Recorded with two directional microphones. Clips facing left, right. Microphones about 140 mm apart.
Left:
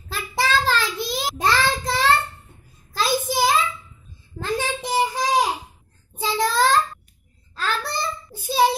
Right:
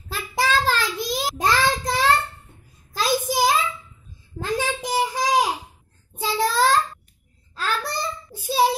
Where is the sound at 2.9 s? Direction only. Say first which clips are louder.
Even; 10° right (ahead or behind).